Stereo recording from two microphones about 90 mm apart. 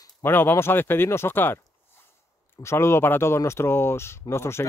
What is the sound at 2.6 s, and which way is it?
Speech, 30° left (ahead or behind).